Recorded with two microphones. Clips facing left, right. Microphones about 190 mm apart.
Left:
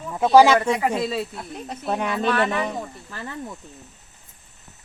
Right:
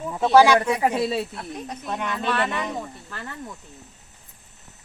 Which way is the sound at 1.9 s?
35° left (ahead or behind).